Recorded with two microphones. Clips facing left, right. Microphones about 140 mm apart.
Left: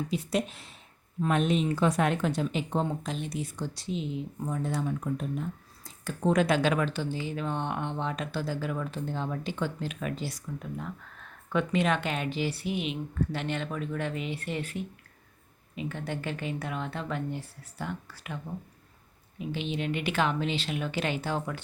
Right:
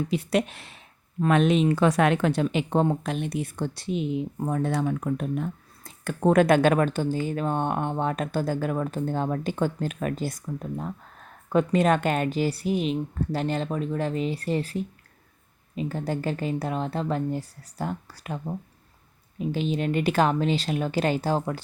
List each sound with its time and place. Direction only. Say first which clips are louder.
0.1 s speech: right 5 dB; 70° right (ahead or behind)
1.2 s speech: right 6 dB; 85° right; by 21.6 s 35° right (ahead or behind)